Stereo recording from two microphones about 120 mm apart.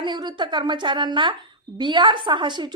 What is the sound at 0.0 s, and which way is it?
A woman's voice, 35° right (ahead or behind).